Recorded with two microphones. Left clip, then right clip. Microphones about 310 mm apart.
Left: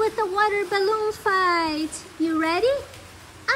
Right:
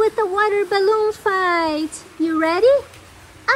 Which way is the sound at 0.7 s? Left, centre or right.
Centre.